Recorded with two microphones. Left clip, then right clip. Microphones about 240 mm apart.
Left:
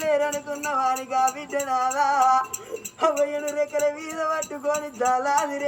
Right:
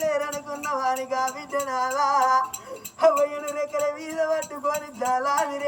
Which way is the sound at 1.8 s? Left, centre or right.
Centre.